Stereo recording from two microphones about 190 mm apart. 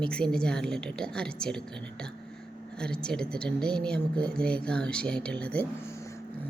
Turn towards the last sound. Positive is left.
turn(degrees=5)  # may be behind; listen again after turning